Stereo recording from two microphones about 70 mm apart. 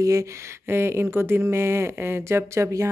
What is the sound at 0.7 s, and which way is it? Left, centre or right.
Speech, right.